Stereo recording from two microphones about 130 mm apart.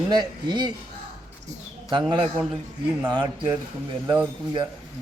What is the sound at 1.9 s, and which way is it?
Speech, 35° right (ahead or behind).